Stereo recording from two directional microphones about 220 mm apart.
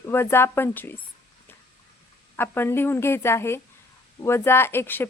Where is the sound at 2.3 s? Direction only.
10° left (ahead or behind).